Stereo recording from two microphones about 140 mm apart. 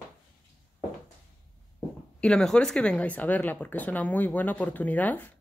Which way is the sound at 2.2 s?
5° left (ahead or behind).